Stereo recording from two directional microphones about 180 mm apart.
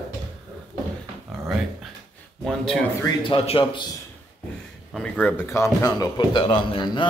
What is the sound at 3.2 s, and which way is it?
Speech, 30° left (ahead or behind).